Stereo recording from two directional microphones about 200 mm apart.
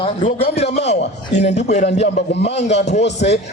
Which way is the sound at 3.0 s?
60° left (ahead or behind).